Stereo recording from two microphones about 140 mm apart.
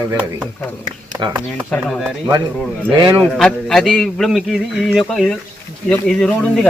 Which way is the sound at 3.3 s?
5° left (ahead or behind).